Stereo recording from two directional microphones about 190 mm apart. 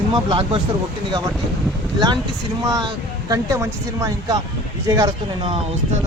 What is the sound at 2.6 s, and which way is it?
Speech, 20° right (ahead or behind).